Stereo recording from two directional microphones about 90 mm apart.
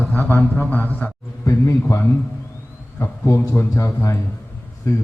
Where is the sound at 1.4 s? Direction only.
35° left (ahead or behind).